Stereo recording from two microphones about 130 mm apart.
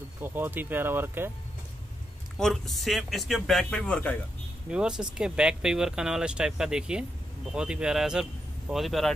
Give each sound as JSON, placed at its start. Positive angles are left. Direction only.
{"t": 0.2, "sound": "speech", "side_deg": -15}
{"t": 2.3, "sound": "speech", "side_deg": 5}
{"t": 4.6, "sound": "speech", "side_deg": -5}